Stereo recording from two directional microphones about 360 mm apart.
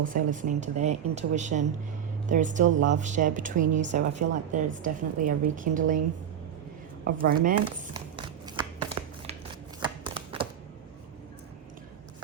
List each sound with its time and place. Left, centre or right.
0.0 s a woman's voice: right
7.0 s a woman's voice: right
8.1 s a sound: centre
9.8 s shuffling cards: centre